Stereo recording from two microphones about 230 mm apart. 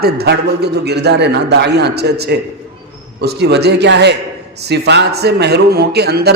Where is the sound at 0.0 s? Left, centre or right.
Right.